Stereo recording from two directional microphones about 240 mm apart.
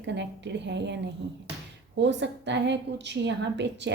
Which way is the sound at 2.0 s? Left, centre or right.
Right.